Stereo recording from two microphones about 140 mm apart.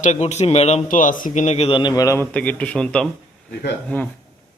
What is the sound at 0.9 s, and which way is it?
A man's voice, 70° left (ahead or behind).